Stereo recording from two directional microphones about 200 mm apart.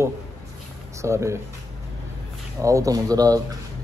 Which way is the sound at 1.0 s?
15° right (ahead or behind).